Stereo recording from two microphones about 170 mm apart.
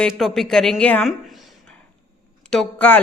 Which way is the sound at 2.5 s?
5° left (ahead or behind).